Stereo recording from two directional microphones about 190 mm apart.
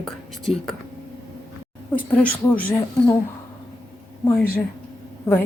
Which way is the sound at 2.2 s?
5° left (ahead or behind).